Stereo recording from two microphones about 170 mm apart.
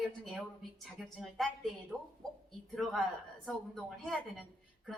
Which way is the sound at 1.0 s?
Centre (ahead or behind).